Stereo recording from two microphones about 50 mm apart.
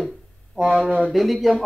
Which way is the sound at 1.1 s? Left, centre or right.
Centre.